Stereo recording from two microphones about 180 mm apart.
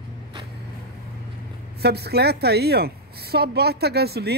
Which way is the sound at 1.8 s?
65° right (ahead or behind).